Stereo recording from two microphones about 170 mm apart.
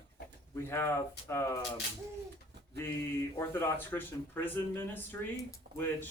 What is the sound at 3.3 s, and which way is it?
Speech, 15° left (ahead or behind).